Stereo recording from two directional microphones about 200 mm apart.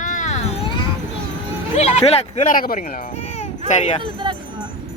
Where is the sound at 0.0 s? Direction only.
40° left (ahead or behind).